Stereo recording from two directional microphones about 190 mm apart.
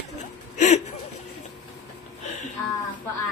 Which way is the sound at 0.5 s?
40° left (ahead or behind).